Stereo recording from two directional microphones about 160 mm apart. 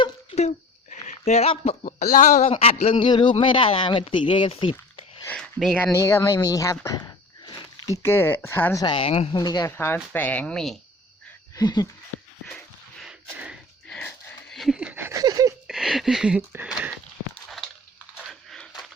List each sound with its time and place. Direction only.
0.0 s speech: 40° left (ahead or behind)
5.2 s speech: 5° left (ahead or behind)
5.8 s speech: 15° left (ahead or behind)
8.8 s speech: 30° left (ahead or behind)
9.3 s speech: 25° left (ahead or behind)
9.7 s speech: 15° left (ahead or behind)
11.5 s speech: 25° left (ahead or behind)
12.5 s a sound: 5° left (ahead or behind); by 15.5 s 20° right (ahead or behind)
15.6 s a sound: centre (ahead or behind)
18.3 s crumpling: centre (ahead or behind)